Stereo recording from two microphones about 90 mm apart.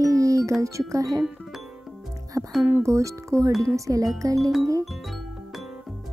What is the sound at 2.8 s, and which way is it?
Speech, 35° right (ahead or behind).